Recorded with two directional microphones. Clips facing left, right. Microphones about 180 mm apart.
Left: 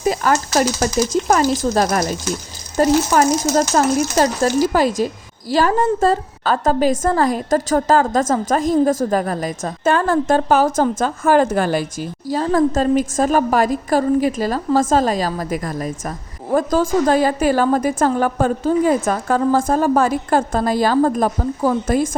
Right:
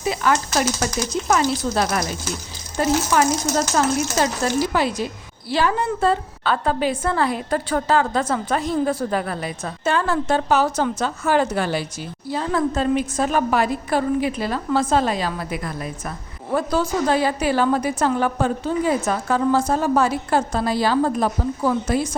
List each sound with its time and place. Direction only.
0.0 s a woman's voice: 40° left (ahead or behind)